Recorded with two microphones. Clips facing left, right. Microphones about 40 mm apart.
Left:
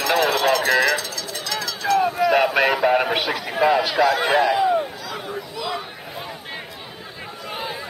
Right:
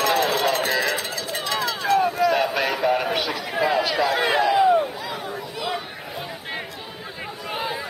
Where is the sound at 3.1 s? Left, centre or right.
Left.